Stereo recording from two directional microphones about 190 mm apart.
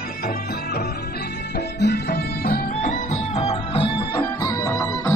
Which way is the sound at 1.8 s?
60° left (ahead or behind).